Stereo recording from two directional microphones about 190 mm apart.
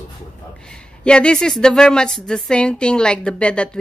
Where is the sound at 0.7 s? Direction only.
5° left (ahead or behind).